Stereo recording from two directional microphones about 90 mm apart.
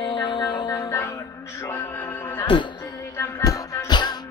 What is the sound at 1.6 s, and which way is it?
Music, 20° left (ahead or behind).